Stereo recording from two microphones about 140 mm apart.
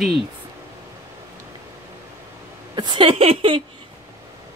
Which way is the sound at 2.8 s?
35° right (ahead or behind).